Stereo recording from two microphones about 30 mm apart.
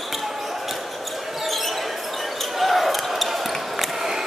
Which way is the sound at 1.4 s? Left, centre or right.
Centre.